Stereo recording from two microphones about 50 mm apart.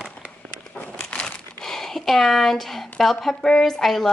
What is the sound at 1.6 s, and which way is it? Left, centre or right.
A woman's voice, centre.